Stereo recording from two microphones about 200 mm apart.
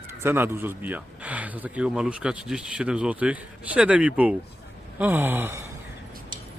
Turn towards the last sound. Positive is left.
turn(degrees=-10)  # may be behind; listen again after turning